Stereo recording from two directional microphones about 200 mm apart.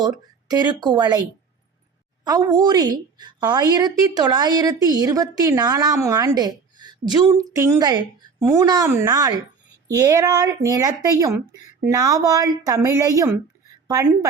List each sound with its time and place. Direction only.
0.0 s speech: 20° right (ahead or behind)
2.2 s a woman's voice: 20° right (ahead or behind)